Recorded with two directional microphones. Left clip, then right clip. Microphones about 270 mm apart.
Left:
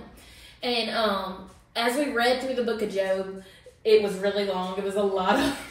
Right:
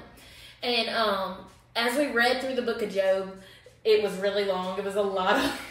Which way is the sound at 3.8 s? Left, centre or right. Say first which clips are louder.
Left 2 dB; centre.